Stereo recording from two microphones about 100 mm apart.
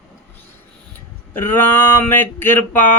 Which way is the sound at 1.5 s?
20° left (ahead or behind).